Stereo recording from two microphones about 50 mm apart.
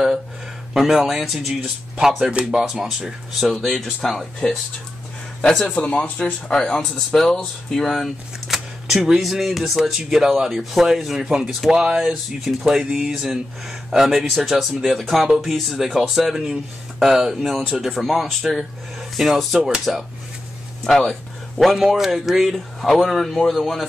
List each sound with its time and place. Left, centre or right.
0.7 s speech: centre
5.5 s speech: centre
5.9 s speech: left
6.5 s speech: centre
20.8 s speech: centre